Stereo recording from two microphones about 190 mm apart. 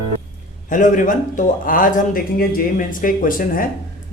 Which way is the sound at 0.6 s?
45° left (ahead or behind).